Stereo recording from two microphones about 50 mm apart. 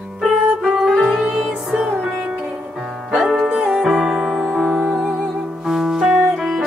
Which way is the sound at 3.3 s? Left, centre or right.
Centre.